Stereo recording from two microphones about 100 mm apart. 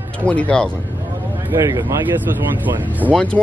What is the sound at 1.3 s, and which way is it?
Speech, 20° right (ahead or behind).